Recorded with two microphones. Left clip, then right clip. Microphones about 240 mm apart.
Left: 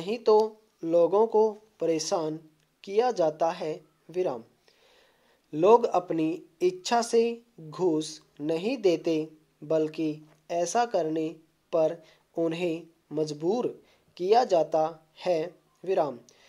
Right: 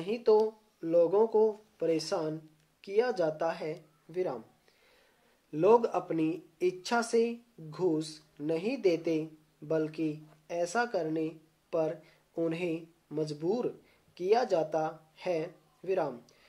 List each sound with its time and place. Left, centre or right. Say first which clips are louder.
0.0 s speech: left 3 dB; left
5.5 s speech: left 4 dB; left